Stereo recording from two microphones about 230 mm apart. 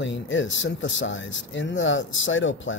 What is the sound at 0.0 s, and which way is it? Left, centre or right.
Speech, left.